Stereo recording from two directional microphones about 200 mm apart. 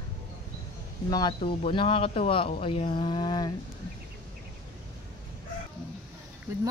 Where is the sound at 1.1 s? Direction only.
20° left (ahead or behind).